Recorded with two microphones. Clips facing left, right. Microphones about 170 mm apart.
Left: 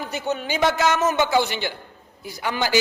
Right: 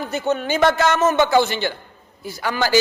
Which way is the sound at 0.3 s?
55° right (ahead or behind).